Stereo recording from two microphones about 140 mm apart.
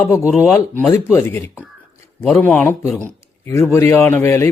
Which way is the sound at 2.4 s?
15° left (ahead or behind).